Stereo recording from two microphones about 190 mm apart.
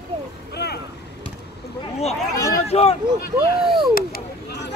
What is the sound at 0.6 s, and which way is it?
Vehicle, 60° left (ahead or behind).